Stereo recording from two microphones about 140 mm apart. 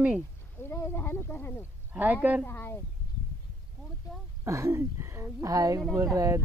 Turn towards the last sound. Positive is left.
turn(degrees=-20)  # may be behind; listen again after turning